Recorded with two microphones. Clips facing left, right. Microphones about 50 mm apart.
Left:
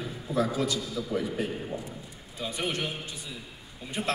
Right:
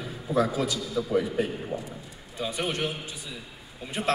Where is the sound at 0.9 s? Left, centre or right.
Right.